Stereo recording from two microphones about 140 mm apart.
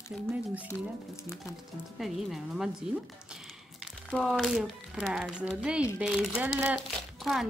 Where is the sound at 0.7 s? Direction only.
20° left (ahead or behind).